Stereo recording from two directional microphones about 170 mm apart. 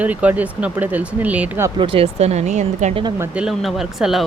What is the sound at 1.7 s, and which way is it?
Speech, 30° right (ahead or behind).